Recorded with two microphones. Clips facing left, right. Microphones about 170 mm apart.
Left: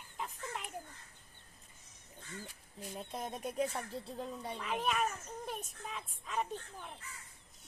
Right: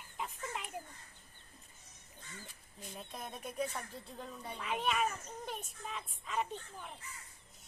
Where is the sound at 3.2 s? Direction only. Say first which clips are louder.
Left 3 dB; 30° left (ahead or behind).